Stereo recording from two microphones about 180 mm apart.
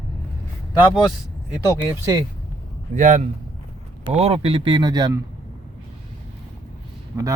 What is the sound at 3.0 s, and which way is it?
A man's voice, 45° right (ahead or behind).